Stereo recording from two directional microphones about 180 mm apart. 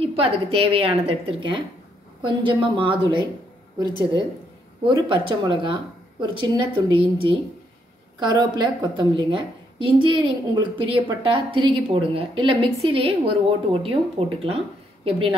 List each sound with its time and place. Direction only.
0.0 s a woman's voice: 30° right (ahead or behind)
4.8 s a woman's voice: 25° right (ahead or behind)